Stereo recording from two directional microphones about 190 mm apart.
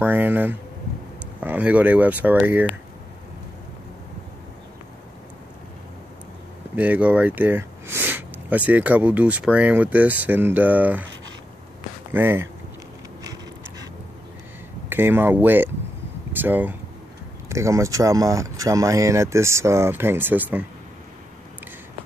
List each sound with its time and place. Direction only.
0.0 s speech: 10° right (ahead or behind)
6.7 s speech: 10° right (ahead or behind)
12.1 s speech: 10° right (ahead or behind)
13.2 s a sound: 20° right (ahead or behind)
14.9 s speech: 10° right (ahead or behind)